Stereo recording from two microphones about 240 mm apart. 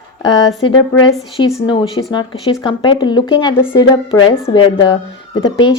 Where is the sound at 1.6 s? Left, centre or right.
Left.